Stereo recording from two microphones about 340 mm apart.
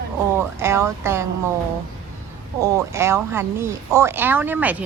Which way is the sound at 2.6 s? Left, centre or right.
Centre.